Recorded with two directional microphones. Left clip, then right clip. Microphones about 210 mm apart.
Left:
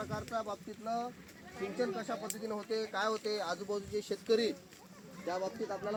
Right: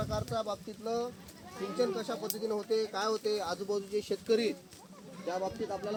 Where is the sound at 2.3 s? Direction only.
45° right (ahead or behind).